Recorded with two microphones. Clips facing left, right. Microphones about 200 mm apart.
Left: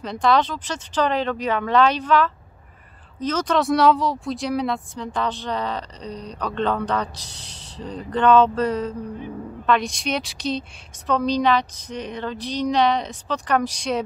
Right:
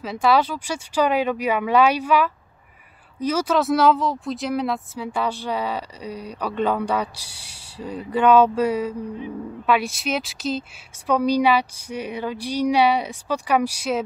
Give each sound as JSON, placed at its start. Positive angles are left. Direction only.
{"t": 0.0, "sound": "speech", "side_deg": -5}